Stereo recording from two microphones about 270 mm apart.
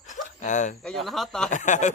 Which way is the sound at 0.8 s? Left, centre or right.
Centre.